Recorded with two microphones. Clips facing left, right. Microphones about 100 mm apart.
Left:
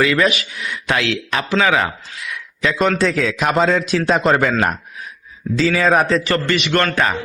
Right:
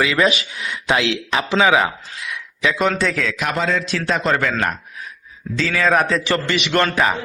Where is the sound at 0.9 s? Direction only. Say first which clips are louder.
Right 1 dB; 15° right (ahead or behind).